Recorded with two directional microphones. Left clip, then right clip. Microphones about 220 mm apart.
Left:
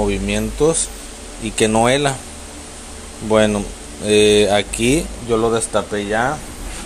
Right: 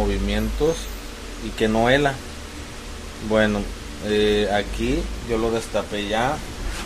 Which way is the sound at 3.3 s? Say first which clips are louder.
Left 5 dB; 15° left (ahead or behind).